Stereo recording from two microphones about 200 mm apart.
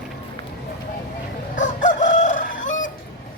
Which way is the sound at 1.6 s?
40° left (ahead or behind).